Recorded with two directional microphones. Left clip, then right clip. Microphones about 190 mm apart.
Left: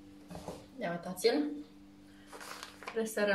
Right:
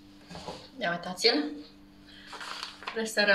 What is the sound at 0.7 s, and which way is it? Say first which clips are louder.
Speech: right 7 dB; 20° left (ahead or behind).